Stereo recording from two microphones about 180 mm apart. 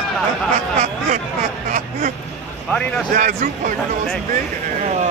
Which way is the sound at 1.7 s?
55° right (ahead or behind).